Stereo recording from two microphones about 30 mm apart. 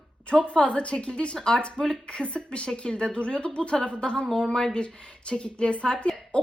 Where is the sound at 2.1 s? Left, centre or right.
Left.